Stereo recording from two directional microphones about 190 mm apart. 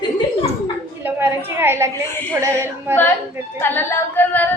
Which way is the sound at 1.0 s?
10° right (ahead or behind).